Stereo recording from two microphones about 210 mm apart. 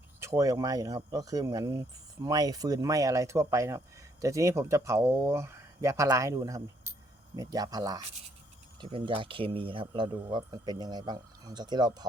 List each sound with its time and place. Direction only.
0.2 s speech: 15° right (ahead or behind)